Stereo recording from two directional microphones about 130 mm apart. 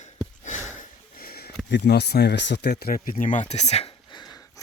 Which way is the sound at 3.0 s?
90° left.